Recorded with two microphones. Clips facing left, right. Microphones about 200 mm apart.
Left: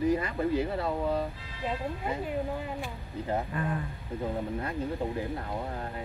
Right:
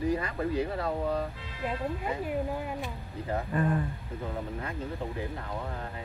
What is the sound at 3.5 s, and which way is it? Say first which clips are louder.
Speech: right 4 dB; 40° right (ahead or behind).